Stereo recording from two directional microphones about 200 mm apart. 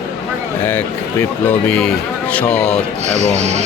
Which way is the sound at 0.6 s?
10° left (ahead or behind).